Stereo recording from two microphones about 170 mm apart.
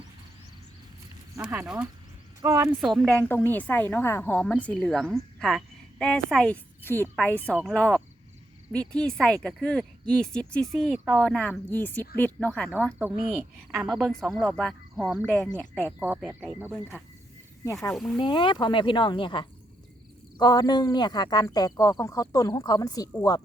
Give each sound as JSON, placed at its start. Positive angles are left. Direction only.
{"t": 1.4, "sound": "speech", "side_deg": -5}
{"t": 2.4, "sound": "speech", "side_deg": -20}
{"t": 2.8, "sound": "a woman's voice", "side_deg": 0}
{"t": 16.0, "sound": "speech", "side_deg": -10}
{"t": 17.9, "sound": "speech", "side_deg": 0}
{"t": 18.2, "sound": "speech", "side_deg": 30}